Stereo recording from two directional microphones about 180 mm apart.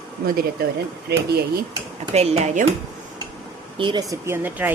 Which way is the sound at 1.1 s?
65° right (ahead or behind).